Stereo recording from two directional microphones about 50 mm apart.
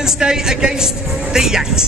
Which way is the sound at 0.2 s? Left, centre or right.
Centre.